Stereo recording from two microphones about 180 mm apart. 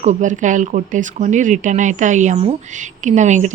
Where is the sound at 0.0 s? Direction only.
40° right (ahead or behind).